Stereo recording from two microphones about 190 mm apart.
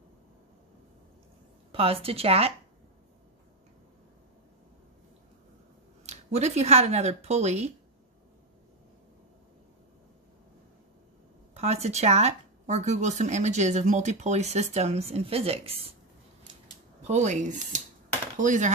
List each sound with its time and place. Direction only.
1.7 s speech: 30° right (ahead or behind)
6.0 s speech: 35° right (ahead or behind)
11.5 s speech: 35° right (ahead or behind)
17.0 s speech: 35° right (ahead or behind)